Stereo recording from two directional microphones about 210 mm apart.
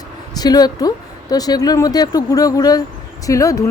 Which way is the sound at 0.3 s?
20° left (ahead or behind).